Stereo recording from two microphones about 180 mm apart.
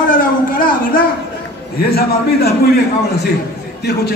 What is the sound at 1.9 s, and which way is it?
Speech, 60° left (ahead or behind).